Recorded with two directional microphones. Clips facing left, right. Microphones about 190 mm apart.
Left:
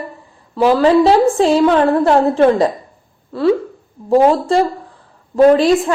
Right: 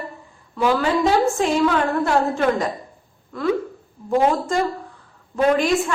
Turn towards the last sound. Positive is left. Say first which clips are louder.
# left 8 dB
turn(degrees=35)  # may be behind; listen again after turning